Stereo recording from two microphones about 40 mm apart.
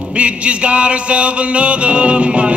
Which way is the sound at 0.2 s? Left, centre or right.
Right.